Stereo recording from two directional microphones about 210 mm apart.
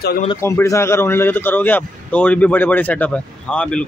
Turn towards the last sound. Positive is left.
turn(degrees=5)  # may be behind; listen again after turning